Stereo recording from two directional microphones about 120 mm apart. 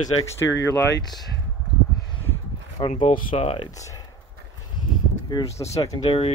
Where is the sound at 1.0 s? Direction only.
35° left (ahead or behind).